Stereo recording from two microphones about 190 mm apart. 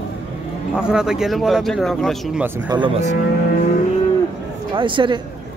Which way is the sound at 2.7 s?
20° right (ahead or behind).